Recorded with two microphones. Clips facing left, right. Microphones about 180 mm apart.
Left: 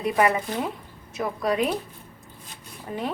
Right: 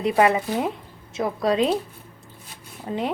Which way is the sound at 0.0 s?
25° right (ahead or behind).